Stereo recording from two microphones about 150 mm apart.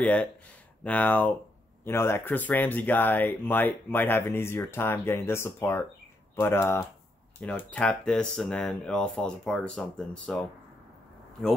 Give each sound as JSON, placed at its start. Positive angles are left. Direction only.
{"t": 0.0, "sound": "speech", "side_deg": 10}